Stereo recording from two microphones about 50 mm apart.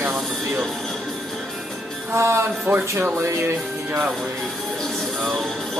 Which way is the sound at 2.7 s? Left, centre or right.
Right.